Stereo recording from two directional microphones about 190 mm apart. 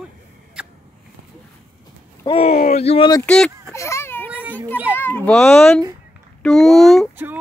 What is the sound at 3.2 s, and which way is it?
Speech, 5° left (ahead or behind).